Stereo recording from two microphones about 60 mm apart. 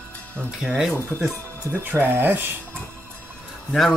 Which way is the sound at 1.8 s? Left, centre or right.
Right.